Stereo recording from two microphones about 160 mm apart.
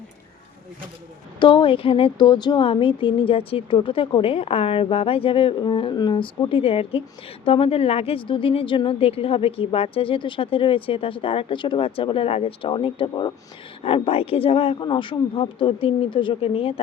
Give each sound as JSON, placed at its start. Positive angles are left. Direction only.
{"t": 1.4, "sound": "speech", "side_deg": 30}